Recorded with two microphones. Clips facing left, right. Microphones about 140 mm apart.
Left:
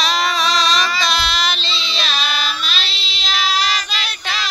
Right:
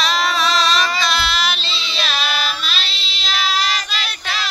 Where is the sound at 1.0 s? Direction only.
Centre (ahead or behind).